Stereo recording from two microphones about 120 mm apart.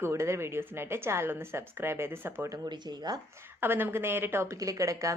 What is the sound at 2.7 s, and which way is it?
Speech, 35° right (ahead or behind).